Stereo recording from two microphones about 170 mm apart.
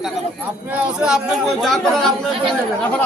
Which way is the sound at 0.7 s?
5° right (ahead or behind).